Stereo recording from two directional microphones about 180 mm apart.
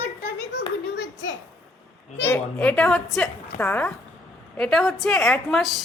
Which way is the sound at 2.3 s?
5° left (ahead or behind).